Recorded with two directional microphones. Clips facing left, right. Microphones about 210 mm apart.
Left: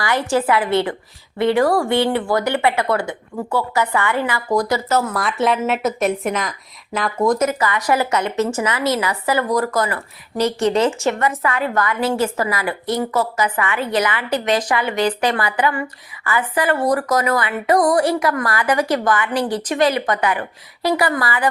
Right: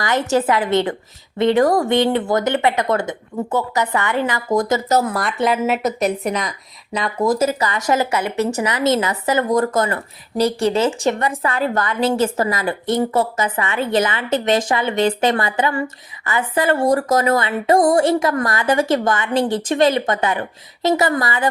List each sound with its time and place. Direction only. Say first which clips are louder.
0.0 s speech: right 1 dB; 20° right (ahead or behind)
4.9 s speech: right 2 dB; 40° right (ahead or behind)
5.1 s speech: even; centre (ahead or behind)
7.3 s speech: even; 30° right (ahead or behind)
8.1 s a woman's voice: left 1 dB; 10° right (ahead or behind)
8.6 s speech: right 2 dB; 20° right (ahead or behind)
10.4 s a woman's voice: even; 10° right (ahead or behind)
10.8 s speech: even; 25° right (ahead or behind)